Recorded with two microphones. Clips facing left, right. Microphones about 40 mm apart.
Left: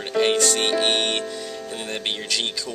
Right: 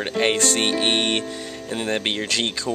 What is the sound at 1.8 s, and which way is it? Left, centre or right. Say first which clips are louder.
Speech: right 5 dB; right.